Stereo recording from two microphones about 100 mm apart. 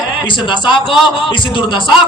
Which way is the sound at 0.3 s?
55° left (ahead or behind).